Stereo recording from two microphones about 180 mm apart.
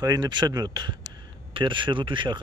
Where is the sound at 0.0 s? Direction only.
20° right (ahead or behind).